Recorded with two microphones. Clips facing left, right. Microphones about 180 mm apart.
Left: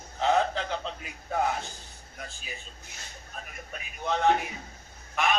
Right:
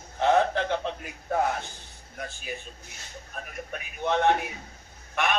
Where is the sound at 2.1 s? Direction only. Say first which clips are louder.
Right 6 dB; 55° right (ahead or behind).